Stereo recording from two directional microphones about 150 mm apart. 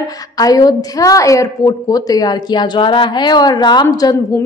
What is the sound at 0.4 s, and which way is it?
A woman's voice, 25° left (ahead or behind).